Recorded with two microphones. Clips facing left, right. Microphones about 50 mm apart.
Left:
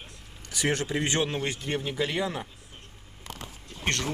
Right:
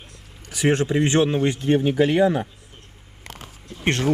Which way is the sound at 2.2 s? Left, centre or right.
Right.